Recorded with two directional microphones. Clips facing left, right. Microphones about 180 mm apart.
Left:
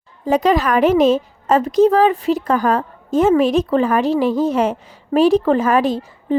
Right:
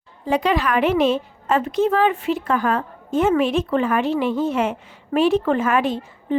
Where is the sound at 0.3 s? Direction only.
40° left (ahead or behind).